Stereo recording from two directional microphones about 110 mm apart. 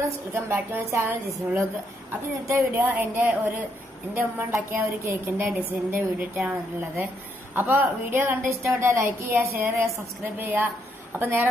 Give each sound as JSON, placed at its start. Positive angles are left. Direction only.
{"t": 0.3, "sound": "a woman's voice", "side_deg": -20}